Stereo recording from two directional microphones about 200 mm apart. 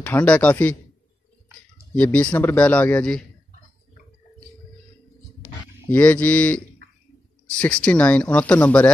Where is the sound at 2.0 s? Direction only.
10° left (ahead or behind).